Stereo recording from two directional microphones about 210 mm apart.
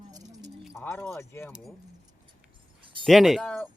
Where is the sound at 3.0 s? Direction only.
Centre (ahead or behind).